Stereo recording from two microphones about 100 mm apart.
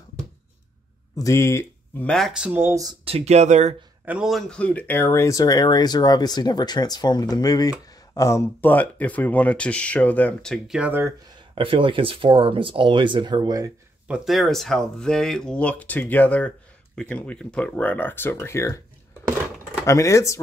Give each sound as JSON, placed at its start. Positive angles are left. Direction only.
{"t": 1.1, "sound": "speech", "side_deg": 30}
{"t": 2.0, "sound": "speech", "side_deg": 5}
{"t": 2.5, "sound": "speech", "side_deg": -25}
{"t": 3.1, "sound": "speech", "side_deg": -90}
{"t": 4.0, "sound": "a man's voice", "side_deg": -15}
{"t": 4.3, "sound": "speech", "side_deg": 5}
{"t": 8.1, "sound": "speech", "side_deg": 30}
{"t": 10.9, "sound": "speech", "side_deg": -20}
{"t": 11.5, "sound": "speech", "side_deg": -60}
{"t": 14.0, "sound": "speech", "side_deg": -5}
{"t": 19.9, "sound": "speech", "side_deg": 30}